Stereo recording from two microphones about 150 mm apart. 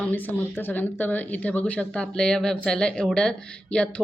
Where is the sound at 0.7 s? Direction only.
10° left (ahead or behind).